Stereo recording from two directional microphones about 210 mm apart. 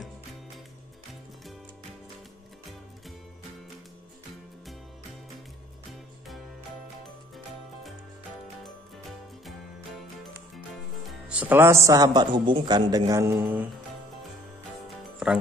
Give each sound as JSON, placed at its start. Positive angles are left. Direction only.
{"t": 10.5, "sound": "a man's voice", "side_deg": 0}